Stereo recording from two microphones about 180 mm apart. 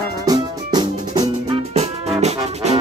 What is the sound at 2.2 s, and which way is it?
Music, 40° right (ahead or behind).